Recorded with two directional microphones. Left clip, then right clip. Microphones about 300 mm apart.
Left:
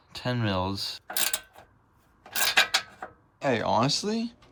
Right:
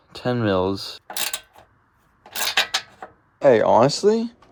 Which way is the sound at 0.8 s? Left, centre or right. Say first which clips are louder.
Right 2 dB; centre.